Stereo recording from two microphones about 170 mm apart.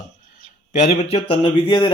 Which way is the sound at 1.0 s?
35° left (ahead or behind).